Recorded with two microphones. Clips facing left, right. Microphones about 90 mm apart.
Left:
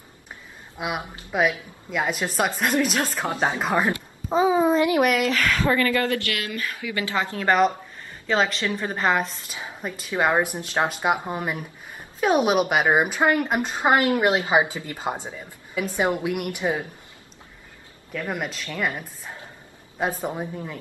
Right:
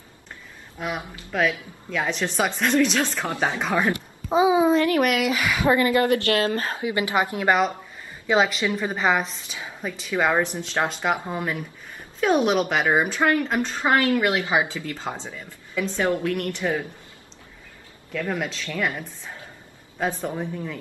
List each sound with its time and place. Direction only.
0.7 s a woman's voice: 10° left (ahead or behind)
4.3 s a woman's voice: 5° right (ahead or behind)
4.7 s a woman's voice: 15° left (ahead or behind)
5.0 s a woman's voice: 5° right (ahead or behind); by 16.8 s 15° left (ahead or behind)
18.3 s a woman's voice: 5° left (ahead or behind)